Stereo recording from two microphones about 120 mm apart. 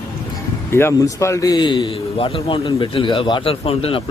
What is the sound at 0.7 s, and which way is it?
Speech, 20° left (ahead or behind).